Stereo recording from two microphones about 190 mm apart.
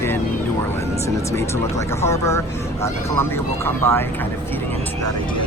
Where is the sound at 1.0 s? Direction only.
15° left (ahead or behind).